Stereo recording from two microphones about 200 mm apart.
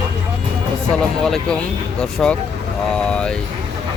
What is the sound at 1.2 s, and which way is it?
Speech, 5° left (ahead or behind).